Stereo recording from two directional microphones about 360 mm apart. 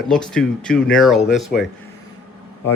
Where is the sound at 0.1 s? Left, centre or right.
Centre.